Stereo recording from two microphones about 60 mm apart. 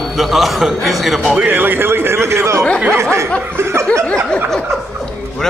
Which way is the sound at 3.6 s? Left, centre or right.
Right.